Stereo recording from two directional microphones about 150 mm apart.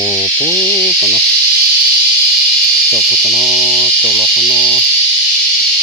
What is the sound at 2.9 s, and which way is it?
Speech, centre (ahead or behind).